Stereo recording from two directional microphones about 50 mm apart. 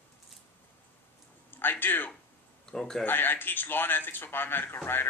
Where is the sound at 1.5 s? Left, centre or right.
Left.